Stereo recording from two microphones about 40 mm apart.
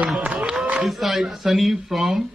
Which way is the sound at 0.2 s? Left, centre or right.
Right.